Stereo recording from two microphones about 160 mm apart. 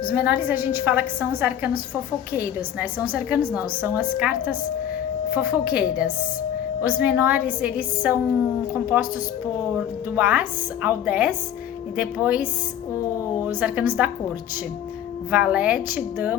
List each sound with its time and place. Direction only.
0.1 s a woman's voice: 10° right (ahead or behind)
6.8 s a woman's voice: 10° right (ahead or behind)
10.2 s a woman's voice: 10° right (ahead or behind)
13.4 s a woman's voice: 10° right (ahead or behind)
15.3 s a woman's voice: 10° right (ahead or behind)